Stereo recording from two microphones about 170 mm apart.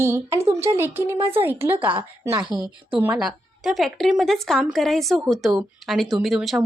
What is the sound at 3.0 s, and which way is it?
A woman's voice, 5° right (ahead or behind).